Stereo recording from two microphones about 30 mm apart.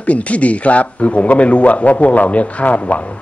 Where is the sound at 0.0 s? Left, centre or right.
Left.